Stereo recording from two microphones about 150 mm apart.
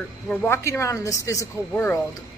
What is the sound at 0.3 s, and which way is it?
A woman's voice, 15° left (ahead or behind).